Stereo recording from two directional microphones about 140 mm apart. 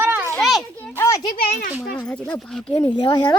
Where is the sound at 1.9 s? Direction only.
10° left (ahead or behind).